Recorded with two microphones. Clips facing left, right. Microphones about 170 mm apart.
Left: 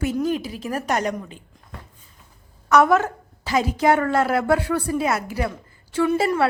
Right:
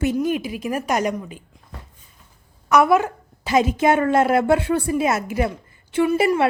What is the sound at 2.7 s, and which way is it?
A woman's voice, 10° right (ahead or behind).